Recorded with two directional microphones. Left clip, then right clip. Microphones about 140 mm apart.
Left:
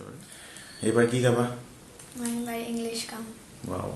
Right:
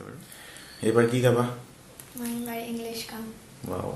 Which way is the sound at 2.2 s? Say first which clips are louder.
Left 1 dB; 30° left (ahead or behind).